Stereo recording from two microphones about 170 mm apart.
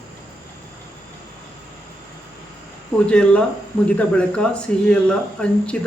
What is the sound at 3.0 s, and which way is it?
Speech, 5° left (ahead or behind).